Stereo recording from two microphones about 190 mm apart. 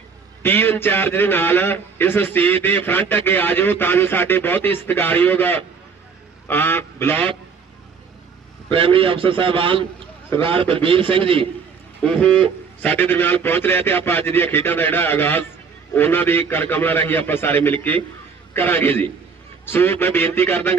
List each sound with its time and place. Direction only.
0.4 s a man's voice: 10° left (ahead or behind)
8.7 s a man's voice: 30° right (ahead or behind)
12.0 s a man's voice: 5° left (ahead or behind)